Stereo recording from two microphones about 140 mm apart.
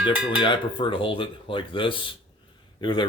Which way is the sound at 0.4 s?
35° left (ahead or behind).